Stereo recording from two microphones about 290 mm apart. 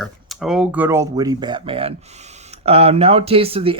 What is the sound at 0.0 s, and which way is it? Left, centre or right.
Speech, centre.